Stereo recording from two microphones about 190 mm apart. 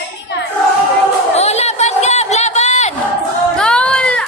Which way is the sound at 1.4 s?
35° left (ahead or behind).